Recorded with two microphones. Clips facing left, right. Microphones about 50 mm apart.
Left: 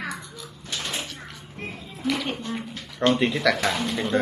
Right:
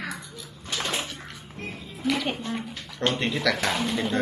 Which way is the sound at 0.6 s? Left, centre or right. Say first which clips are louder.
Right 2 dB; right.